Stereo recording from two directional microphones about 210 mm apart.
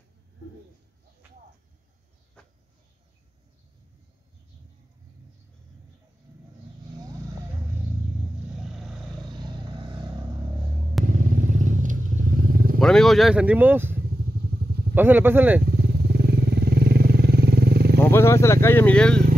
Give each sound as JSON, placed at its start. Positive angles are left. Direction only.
{"t": 8.5, "sound": "vehicle", "side_deg": 0}
{"t": 9.3, "sound": "vehicle", "side_deg": -20}
{"t": 11.1, "sound": "vehicle", "side_deg": -35}
{"t": 12.7, "sound": "speech", "side_deg": 0}
{"t": 14.0, "sound": "motorcycle", "side_deg": -50}
{"t": 15.0, "sound": "speech", "side_deg": -10}
{"t": 15.6, "sound": "motorcycle", "side_deg": -50}
{"t": 18.0, "sound": "speech", "side_deg": 10}